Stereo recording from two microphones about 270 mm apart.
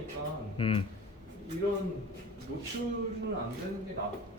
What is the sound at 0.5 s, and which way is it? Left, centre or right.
Speech, centre.